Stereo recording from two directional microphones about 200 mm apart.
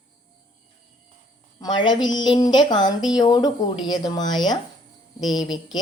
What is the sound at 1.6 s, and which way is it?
A woman's voice, 20° left (ahead or behind).